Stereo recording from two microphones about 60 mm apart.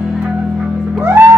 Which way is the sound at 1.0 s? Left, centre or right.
Right.